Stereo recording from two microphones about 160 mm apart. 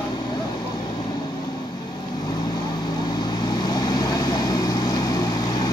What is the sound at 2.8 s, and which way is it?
Vehicle, 25° left (ahead or behind).